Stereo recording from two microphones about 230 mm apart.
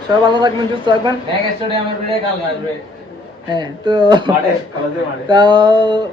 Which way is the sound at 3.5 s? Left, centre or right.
Centre.